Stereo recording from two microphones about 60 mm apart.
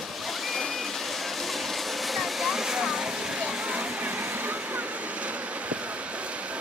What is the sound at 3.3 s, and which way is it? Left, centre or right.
Vehicle, centre.